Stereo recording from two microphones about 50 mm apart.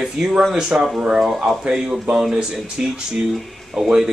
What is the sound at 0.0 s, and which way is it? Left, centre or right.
Speech, centre.